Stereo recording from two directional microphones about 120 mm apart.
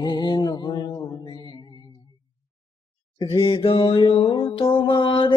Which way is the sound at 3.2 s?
40° left (ahead or behind).